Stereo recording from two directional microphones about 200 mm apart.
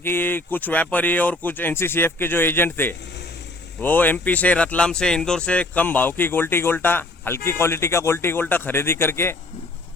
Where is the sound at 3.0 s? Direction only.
60° left (ahead or behind).